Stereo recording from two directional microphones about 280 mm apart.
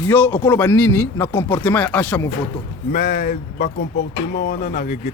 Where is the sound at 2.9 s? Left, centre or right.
Left.